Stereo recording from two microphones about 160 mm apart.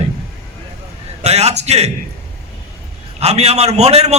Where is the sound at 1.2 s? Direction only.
40° right (ahead or behind).